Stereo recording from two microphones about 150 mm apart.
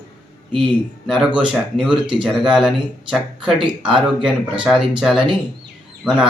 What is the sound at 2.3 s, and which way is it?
Speech, 5° right (ahead or behind).